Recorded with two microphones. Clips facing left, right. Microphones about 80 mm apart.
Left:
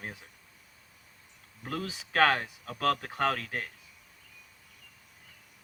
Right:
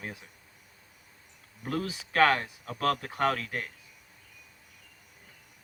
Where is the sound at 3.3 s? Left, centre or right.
Left.